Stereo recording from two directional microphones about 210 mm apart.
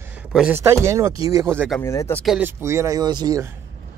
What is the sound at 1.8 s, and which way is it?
Speech, 10° left (ahead or behind).